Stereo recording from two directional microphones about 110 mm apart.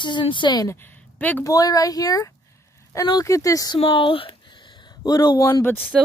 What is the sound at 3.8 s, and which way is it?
Speech, 55° left (ahead or behind).